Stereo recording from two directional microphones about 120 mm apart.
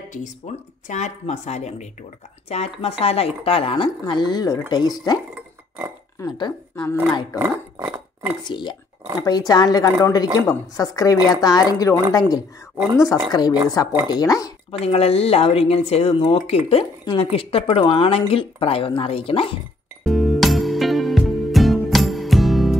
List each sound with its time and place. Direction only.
0.5 s speech: 65° left (ahead or behind)
0.8 s speech: 80° left; by 3.9 s 50° left (ahead or behind)
4.0 s a woman's voice: 35° left (ahead or behind)
6.7 s a woman's voice: 15° left (ahead or behind)
7.3 s speech: 15° right (ahead or behind)
8.5 s a woman's voice: 40° left (ahead or behind)
14.7 s speech: 55° left (ahead or behind)
20.0 s music: centre (ahead or behind)